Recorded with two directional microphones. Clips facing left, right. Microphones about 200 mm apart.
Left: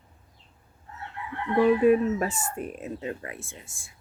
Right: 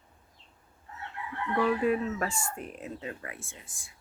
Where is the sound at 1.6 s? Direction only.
20° left (ahead or behind).